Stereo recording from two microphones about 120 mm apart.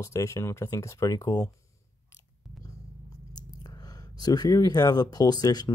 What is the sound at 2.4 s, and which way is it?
Biting, centre (ahead or behind).